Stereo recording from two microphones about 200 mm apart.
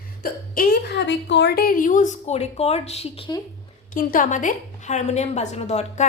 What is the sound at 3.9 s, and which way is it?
Speech, 40° left (ahead or behind).